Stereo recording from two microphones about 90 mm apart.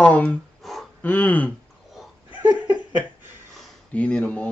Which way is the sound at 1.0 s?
15° left (ahead or behind).